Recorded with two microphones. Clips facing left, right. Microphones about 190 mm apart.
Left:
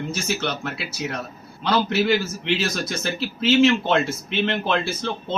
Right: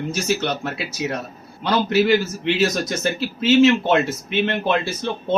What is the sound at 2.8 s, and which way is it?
Speech, 15° right (ahead or behind).